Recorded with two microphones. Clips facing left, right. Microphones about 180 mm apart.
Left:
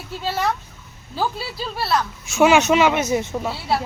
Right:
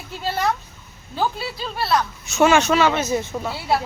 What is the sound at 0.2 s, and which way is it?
Speech, centre (ahead or behind).